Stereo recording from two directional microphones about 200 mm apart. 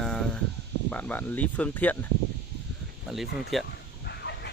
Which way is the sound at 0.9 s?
10° left (ahead or behind).